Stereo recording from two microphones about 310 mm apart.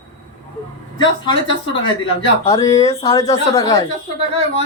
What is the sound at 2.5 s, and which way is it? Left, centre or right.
Speech, centre.